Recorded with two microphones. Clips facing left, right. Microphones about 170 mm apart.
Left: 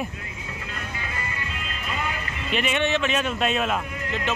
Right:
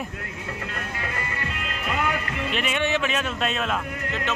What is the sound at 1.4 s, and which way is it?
Music, 60° right (ahead or behind).